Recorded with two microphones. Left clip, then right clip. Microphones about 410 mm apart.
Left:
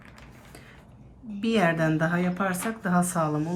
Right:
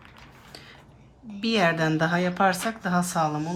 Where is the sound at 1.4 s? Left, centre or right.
Centre.